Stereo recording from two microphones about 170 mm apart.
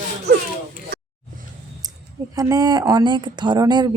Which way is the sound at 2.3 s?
20° right (ahead or behind).